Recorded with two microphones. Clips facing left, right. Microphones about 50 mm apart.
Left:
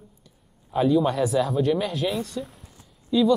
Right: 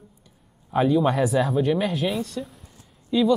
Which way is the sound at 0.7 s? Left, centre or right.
Centre.